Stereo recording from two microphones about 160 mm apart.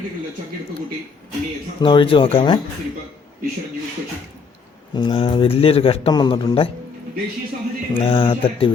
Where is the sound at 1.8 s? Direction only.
30° left (ahead or behind).